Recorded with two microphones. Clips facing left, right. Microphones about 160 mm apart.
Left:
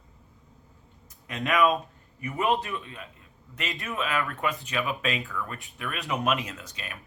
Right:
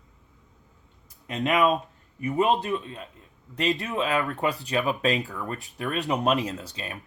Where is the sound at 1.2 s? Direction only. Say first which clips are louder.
Right 1 dB; 25° right (ahead or behind).